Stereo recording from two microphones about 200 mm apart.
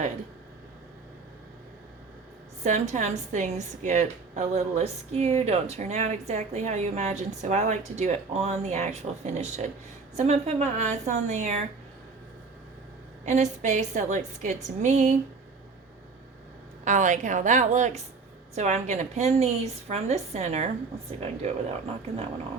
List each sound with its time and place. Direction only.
2.6 s a woman's voice: 35° right (ahead or behind)
13.2 s a woman's voice: 35° right (ahead or behind)
16.8 s a woman's voice: 40° right (ahead or behind)